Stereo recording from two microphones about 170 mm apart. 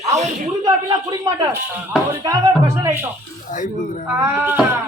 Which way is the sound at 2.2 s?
20° right (ahead or behind).